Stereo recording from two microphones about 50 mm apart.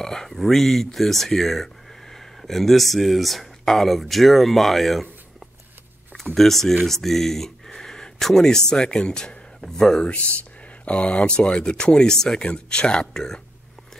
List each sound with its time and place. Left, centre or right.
0.0 s speech: centre
6.3 s speech: centre